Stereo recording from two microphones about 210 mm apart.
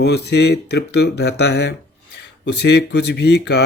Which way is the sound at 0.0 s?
50° left (ahead or behind).